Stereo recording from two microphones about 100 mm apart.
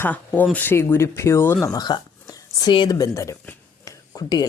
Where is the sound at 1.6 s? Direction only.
40° left (ahead or behind).